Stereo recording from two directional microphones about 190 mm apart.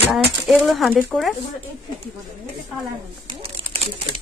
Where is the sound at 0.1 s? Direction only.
Centre (ahead or behind).